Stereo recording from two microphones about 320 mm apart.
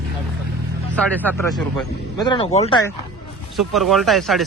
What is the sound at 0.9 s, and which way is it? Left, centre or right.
Speech, centre.